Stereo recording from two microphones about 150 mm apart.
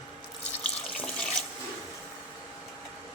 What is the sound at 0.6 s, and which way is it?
Water tap, 5° left (ahead or behind).